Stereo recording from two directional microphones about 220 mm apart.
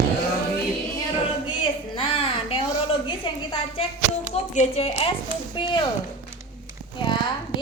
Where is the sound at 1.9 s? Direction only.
25° left (ahead or behind).